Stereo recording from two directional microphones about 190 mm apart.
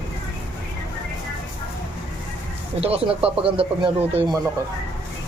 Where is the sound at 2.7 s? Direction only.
30° right (ahead or behind).